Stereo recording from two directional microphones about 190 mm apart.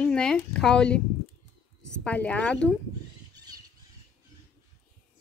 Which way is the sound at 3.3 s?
20° right (ahead or behind).